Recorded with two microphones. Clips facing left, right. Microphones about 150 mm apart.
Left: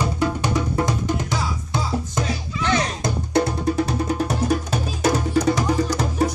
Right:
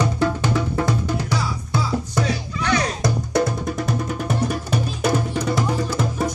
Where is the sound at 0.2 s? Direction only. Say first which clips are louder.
Right 1 dB; 15° left (ahead or behind).